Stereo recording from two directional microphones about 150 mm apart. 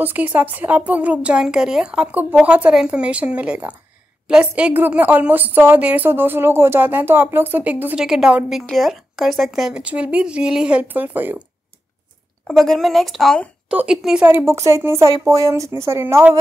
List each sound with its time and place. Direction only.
0.0 s a woman's voice: 10° right (ahead or behind)
12.4 s a woman's voice: centre (ahead or behind); by 16.3 s 15° right (ahead or behind)